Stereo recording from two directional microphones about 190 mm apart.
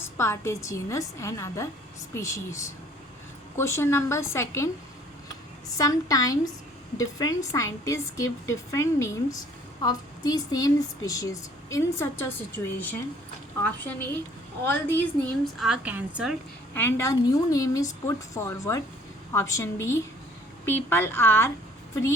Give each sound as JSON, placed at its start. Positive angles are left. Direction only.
{"t": 0.0, "sound": "a woman's voice", "side_deg": 15}
{"t": 5.7, "sound": "a woman's voice", "side_deg": 20}
{"t": 16.7, "sound": "a woman's voice", "side_deg": 15}